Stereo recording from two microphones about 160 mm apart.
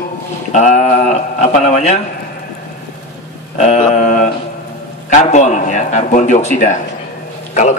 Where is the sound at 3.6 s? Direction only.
45° left (ahead or behind).